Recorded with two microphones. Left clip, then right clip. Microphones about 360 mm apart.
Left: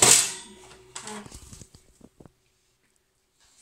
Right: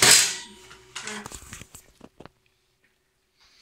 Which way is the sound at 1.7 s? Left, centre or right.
Right.